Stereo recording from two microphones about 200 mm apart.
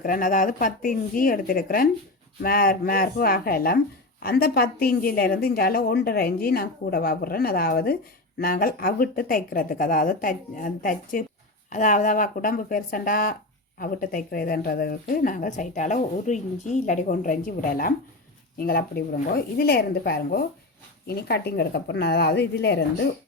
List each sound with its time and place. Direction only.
0.0 s speech: 45° left (ahead or behind)